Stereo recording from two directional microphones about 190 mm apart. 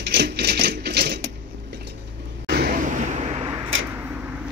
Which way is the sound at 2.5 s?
50° right (ahead or behind).